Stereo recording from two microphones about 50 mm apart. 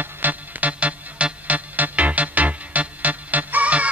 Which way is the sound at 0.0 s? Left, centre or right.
Right.